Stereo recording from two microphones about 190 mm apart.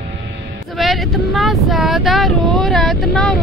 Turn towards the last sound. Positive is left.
turn(degrees=5)  # may be behind; listen again after turning